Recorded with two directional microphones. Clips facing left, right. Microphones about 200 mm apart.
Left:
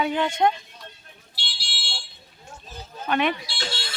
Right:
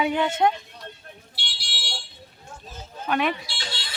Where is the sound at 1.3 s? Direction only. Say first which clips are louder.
Left 4 dB; 60° right (ahead or behind).